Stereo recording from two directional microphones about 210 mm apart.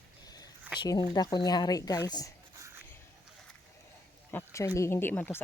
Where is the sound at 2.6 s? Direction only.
10° right (ahead or behind).